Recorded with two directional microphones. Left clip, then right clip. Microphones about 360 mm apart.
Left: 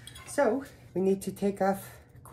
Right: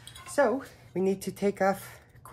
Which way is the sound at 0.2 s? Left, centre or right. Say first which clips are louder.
Right 1 dB; centre.